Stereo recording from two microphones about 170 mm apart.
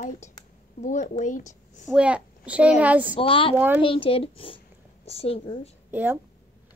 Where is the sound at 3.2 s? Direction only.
30° left (ahead or behind).